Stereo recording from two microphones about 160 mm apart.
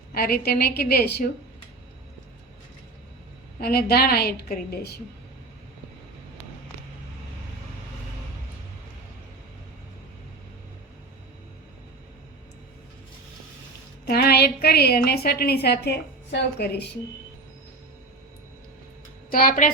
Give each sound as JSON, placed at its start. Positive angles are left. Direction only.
{"t": 0.1, "sound": "a woman's voice", "side_deg": 75}
{"t": 3.6, "sound": "a woman's voice", "side_deg": 75}
{"t": 14.0, "sound": "a woman's voice", "side_deg": 80}
{"t": 19.3, "sound": "a woman's voice", "side_deg": 60}